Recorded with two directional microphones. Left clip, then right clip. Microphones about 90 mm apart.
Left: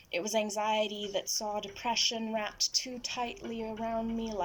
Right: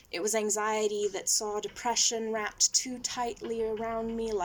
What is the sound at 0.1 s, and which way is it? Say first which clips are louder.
A woman's voice: right 2 dB; 20° left (ahead or behind).